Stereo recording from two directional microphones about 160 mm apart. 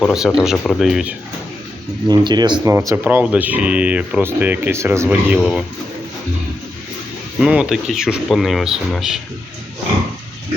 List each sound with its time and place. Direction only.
0.1 s speech: 5° right (ahead or behind)
2.0 s speech: 25° right (ahead or behind)
2.7 s speech: 15° right (ahead or behind)
5.4 s speech: centre (ahead or behind)
7.3 s speech: 5° right (ahead or behind)